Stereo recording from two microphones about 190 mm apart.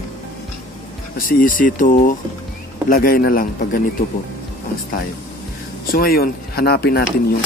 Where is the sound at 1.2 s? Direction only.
50° left (ahead or behind).